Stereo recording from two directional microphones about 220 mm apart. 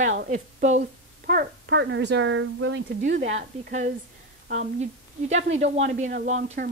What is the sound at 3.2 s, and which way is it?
Speech, 35° right (ahead or behind).